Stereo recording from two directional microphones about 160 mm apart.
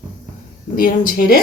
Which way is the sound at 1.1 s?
65° left (ahead or behind).